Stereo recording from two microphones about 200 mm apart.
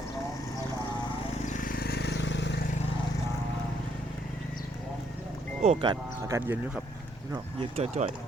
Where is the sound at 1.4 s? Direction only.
45° left (ahead or behind); by 2.6 s 60° left (ahead or behind).